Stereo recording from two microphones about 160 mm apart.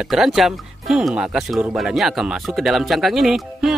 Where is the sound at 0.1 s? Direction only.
Centre (ahead or behind).